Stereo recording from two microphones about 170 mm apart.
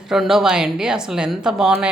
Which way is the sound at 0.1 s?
Centre (ahead or behind).